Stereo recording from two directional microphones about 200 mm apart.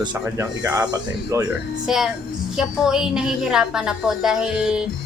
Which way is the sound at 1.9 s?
Centre (ahead or behind).